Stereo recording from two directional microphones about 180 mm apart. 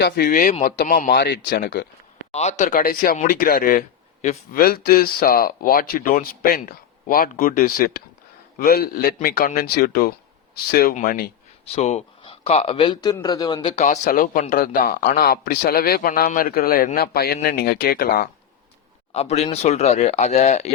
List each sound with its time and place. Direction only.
0.0 s a man's voice: 55° left (ahead or behind)
2.3 s speech: 40° left (ahead or behind)
4.5 s a man's voice: 60° left (ahead or behind)
11.6 s speech: 35° left (ahead or behind)
13.7 s a man's voice: 40° left (ahead or behind); by 18.3 s 55° left (ahead or behind)
19.1 s speech: 35° left (ahead or behind)